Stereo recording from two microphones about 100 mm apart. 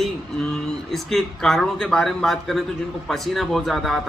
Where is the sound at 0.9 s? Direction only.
5° left (ahead or behind).